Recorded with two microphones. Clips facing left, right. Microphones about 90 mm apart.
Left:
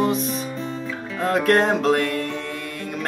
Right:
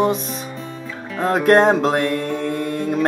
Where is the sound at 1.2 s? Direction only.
30° right (ahead or behind).